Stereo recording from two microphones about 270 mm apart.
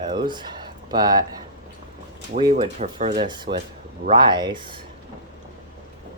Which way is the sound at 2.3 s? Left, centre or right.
Centre.